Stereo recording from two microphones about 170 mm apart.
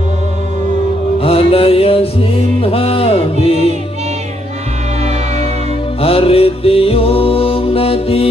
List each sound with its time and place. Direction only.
1.2 s music: 35° left (ahead or behind)
5.9 s music: 35° left (ahead or behind)